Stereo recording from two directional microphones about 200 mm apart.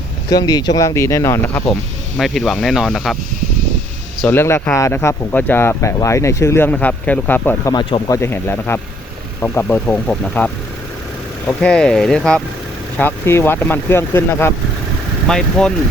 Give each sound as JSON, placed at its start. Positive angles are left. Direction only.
{"t": 0.3, "sound": "speech", "side_deg": 20}
{"t": 4.3, "sound": "speech", "side_deg": 10}
{"t": 11.6, "sound": "speech", "side_deg": 5}